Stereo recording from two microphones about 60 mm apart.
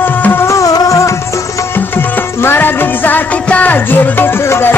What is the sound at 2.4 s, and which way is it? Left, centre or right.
Music, left.